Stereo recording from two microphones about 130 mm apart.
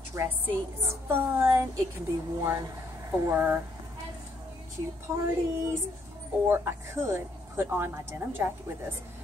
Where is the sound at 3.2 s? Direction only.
20° right (ahead or behind).